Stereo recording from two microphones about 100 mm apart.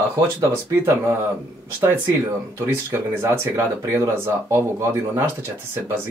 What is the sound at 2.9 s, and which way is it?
Speech, 25° right (ahead or behind).